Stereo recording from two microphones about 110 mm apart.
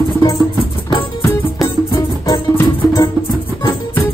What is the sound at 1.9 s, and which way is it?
Music, 30° left (ahead or behind).